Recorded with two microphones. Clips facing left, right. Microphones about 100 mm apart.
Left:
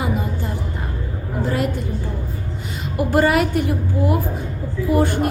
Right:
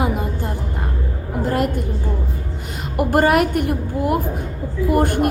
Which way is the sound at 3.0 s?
55° right (ahead or behind).